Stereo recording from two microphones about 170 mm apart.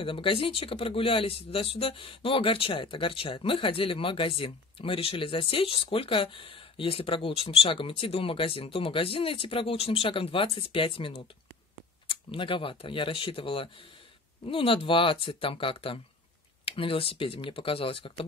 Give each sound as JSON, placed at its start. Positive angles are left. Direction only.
{"t": 0.0, "sound": "speech", "side_deg": 30}